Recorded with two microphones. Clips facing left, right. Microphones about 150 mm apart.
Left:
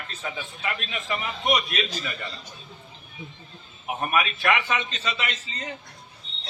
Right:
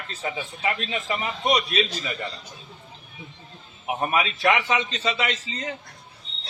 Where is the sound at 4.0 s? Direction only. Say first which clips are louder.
Right 1 dB; 30° right (ahead or behind).